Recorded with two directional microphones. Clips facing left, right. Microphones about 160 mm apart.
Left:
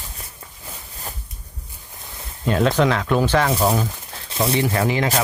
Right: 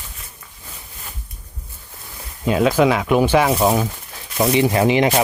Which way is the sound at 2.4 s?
5° right (ahead or behind).